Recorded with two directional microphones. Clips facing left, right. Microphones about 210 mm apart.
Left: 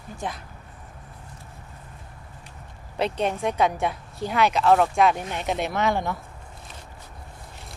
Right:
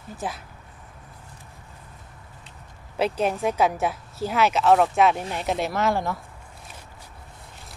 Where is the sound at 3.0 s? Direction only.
5° right (ahead or behind).